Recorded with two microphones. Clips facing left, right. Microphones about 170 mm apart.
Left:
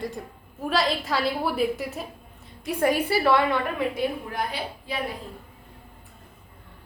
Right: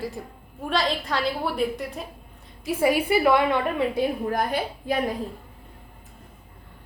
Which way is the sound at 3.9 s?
45° right (ahead or behind).